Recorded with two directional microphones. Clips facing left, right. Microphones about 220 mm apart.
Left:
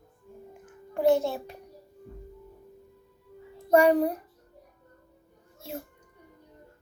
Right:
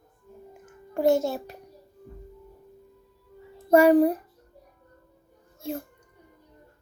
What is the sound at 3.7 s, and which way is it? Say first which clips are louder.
Speech: right 4 dB; 5° right (ahead or behind).